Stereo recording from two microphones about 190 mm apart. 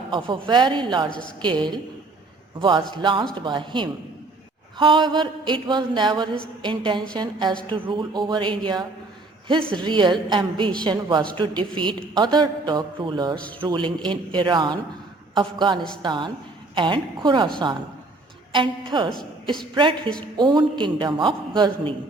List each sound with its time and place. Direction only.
0.1 s a man's voice: 25° right (ahead or behind)
18.5 s a man's voice: 25° right (ahead or behind)
20.3 s a man's voice: 25° right (ahead or behind)